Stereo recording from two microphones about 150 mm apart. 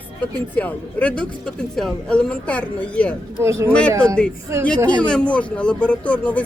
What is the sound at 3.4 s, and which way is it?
Speech, 20° right (ahead or behind).